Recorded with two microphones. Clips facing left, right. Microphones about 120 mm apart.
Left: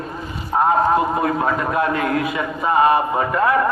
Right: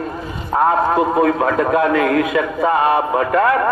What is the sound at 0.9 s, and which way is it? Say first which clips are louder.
A man's voice: right 3 dB; 90° right.